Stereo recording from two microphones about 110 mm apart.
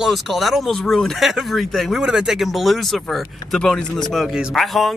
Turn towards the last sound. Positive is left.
turn(degrees=0)  # may be behind; listen again after turning